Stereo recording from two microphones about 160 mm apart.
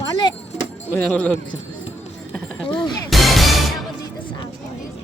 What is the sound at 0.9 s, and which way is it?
Speech, 10° left (ahead or behind).